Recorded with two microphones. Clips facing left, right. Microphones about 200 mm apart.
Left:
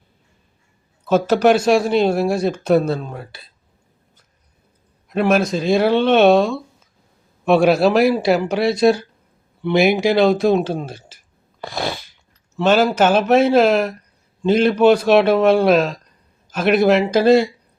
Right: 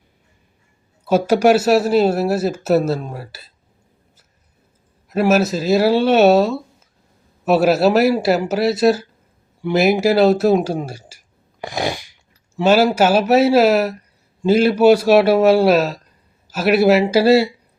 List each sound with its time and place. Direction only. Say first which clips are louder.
1.0 s speech: right 1 dB; 10° right (ahead or behind)
5.0 s speech: right 1 dB; 5° right (ahead or behind)
11.6 s a sound: right 2 dB; 15° right (ahead or behind)
12.5 s speech: right 1 dB; 10° right (ahead or behind)